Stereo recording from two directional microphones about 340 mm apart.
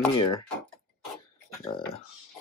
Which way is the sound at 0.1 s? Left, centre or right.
Centre.